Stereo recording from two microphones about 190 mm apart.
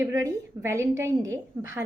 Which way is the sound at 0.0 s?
15° right (ahead or behind).